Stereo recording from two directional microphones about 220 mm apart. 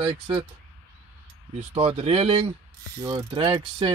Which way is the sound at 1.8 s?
25° right (ahead or behind).